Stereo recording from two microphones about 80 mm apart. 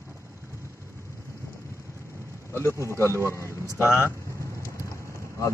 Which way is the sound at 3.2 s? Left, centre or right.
Left.